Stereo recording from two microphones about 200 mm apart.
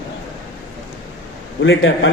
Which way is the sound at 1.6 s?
70° left (ahead or behind).